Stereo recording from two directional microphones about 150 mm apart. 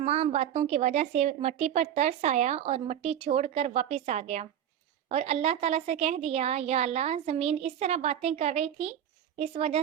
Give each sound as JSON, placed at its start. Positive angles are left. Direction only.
{"t": 0.0, "sound": "a woman's voice", "side_deg": -45}